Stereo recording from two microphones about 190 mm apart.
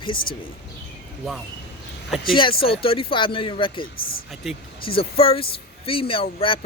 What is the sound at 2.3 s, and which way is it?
Speech, 25° left (ahead or behind).